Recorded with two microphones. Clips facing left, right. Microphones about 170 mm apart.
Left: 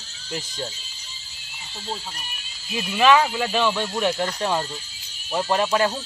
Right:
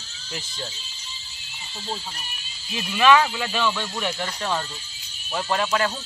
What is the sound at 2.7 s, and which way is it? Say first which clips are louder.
Speech: even; 10° left (ahead or behind).